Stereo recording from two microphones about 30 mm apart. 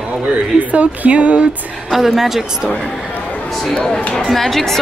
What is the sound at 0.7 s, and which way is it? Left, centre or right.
Speech, right.